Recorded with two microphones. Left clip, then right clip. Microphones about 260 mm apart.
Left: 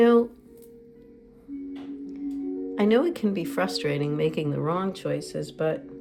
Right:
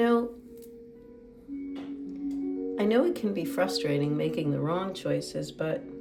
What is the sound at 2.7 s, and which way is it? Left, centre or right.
Speech, left.